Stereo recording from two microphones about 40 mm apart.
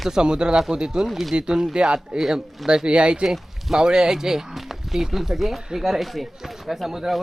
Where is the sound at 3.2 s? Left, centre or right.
Centre.